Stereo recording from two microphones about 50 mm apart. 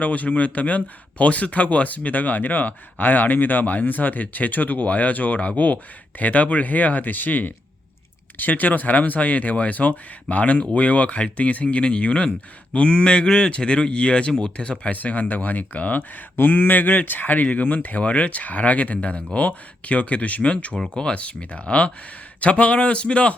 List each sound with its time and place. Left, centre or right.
0.0 s speech: left
14.9 s speech: left